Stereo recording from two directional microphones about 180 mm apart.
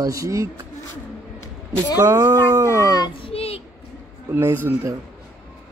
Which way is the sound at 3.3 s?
35° left (ahead or behind).